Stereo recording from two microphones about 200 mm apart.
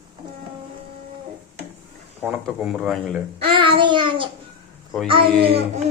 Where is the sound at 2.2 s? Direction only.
5° right (ahead or behind).